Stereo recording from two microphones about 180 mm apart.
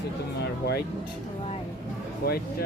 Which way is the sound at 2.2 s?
60° left (ahead or behind).